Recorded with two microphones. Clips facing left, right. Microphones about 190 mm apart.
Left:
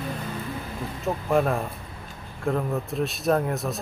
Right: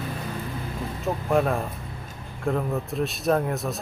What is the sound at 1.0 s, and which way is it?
Speech, centre (ahead or behind).